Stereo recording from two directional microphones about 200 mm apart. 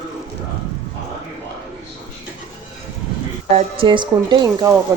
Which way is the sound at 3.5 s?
30° right (ahead or behind).